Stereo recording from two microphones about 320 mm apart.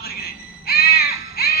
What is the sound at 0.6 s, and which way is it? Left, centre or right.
Caw, left.